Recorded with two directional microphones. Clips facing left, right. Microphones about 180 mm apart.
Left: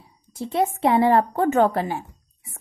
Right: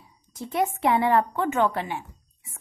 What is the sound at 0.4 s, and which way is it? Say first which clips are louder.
A woman's voice: left 3 dB; 30° left (ahead or behind).